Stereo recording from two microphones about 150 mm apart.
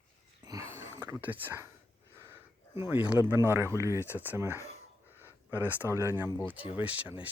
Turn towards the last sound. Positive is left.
turn(degrees=-10)  # may be behind; listen again after turning